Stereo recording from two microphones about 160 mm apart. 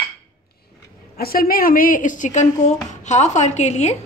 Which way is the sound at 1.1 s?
70° left (ahead or behind).